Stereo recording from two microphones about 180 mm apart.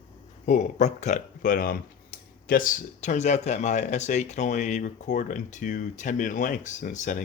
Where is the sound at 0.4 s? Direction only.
45° left (ahead or behind).